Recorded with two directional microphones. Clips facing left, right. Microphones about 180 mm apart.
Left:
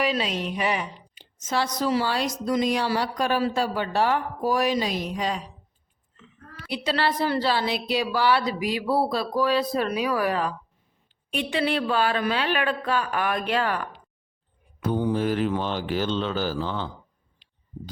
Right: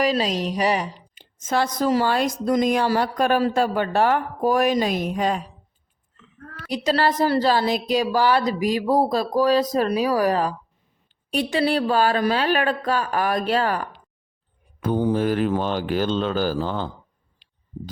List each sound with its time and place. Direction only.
0.0 s a woman's voice: 40° right (ahead or behind)
6.7 s a woman's voice: 45° right (ahead or behind)